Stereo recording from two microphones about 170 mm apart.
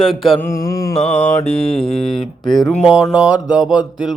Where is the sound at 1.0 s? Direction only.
40° left (ahead or behind).